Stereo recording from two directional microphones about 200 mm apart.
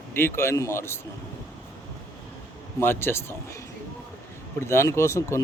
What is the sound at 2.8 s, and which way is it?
Speech, 10° left (ahead or behind).